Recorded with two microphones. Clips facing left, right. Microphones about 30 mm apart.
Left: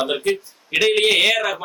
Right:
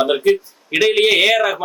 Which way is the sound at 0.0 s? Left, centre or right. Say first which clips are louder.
Right 6 dB; centre.